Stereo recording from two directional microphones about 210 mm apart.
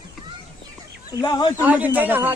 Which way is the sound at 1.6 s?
10° right (ahead or behind).